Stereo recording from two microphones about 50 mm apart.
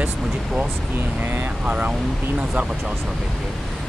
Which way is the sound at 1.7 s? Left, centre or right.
Right.